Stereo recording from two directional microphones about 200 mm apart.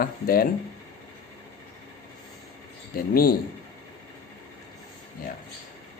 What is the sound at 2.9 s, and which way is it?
Speech, 50° left (ahead or behind).